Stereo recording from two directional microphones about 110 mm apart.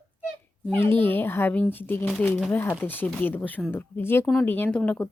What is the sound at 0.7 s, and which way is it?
Speech, 20° left (ahead or behind).